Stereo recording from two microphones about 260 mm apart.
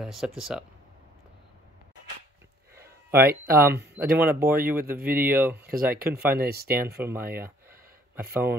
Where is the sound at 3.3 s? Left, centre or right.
Right.